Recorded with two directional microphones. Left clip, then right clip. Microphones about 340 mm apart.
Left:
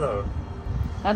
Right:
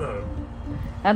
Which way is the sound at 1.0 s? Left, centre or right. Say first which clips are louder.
Right 4 dB; right.